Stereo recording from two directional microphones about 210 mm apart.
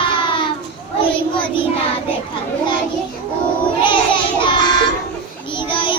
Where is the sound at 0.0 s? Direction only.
25° left (ahead or behind).